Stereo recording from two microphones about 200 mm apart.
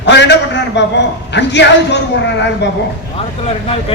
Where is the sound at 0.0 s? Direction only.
60° left (ahead or behind).